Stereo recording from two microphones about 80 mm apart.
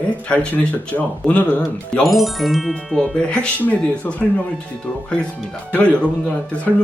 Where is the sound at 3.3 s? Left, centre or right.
Centre.